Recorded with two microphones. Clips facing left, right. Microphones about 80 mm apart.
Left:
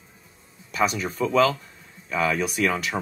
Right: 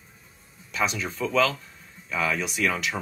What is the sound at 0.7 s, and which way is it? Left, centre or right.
Speech, left.